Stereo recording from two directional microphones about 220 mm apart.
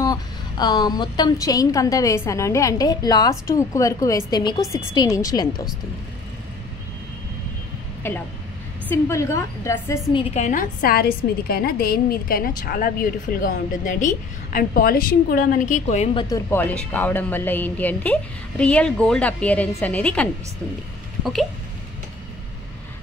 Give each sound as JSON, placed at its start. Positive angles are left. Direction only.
{"t": 0.0, "sound": "a woman's voice", "side_deg": 20}
{"t": 8.0, "sound": "a woman's voice", "side_deg": 10}
{"t": 10.3, "sound": "a woman's voice", "side_deg": 35}
{"t": 16.3, "sound": "a woman's voice", "side_deg": 10}
{"t": 21.2, "sound": "a sound", "side_deg": 0}